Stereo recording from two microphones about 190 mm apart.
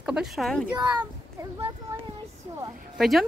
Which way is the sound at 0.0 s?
5° right (ahead or behind).